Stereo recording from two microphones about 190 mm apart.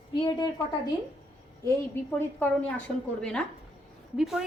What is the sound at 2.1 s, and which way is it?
A woman's voice, 10° left (ahead or behind).